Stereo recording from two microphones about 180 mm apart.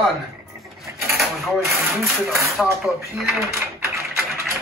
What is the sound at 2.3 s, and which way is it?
Speech, centre (ahead or behind).